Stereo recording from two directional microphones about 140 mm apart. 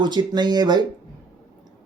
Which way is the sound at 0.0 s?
30° right (ahead or behind).